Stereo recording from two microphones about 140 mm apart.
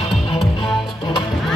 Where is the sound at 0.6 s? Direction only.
40° left (ahead or behind).